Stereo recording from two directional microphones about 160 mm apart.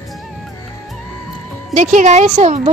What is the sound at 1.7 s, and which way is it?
Speech, 50° right (ahead or behind).